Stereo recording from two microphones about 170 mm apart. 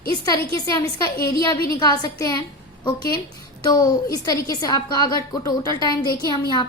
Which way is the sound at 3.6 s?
25° left (ahead or behind).